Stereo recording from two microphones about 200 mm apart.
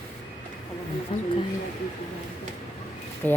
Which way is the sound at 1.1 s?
30° left (ahead or behind).